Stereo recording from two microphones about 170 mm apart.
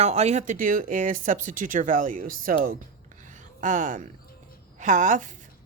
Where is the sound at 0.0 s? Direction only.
40° right (ahead or behind); by 2.7 s 55° right (ahead or behind).